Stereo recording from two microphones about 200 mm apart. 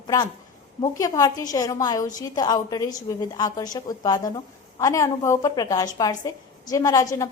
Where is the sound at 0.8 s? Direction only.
15° left (ahead or behind).